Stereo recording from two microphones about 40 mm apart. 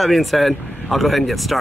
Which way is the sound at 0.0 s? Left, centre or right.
Centre.